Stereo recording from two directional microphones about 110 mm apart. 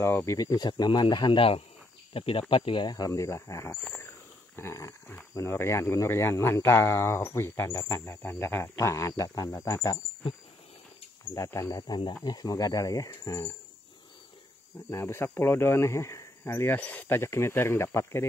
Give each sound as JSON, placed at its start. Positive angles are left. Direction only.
{"t": 0.0, "sound": "speech", "side_deg": 25}
{"t": 3.1, "sound": "speech", "side_deg": 25}
{"t": 3.7, "sound": "wild animals", "side_deg": 15}
{"t": 4.6, "sound": "a sound", "side_deg": 25}
{"t": 5.3, "sound": "speech", "side_deg": 25}
{"t": 11.3, "sound": "speech", "side_deg": 30}
{"t": 14.9, "sound": "speech", "side_deg": 25}